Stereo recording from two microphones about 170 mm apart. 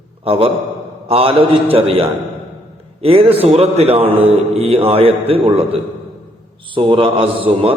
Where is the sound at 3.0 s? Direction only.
35° right (ahead or behind).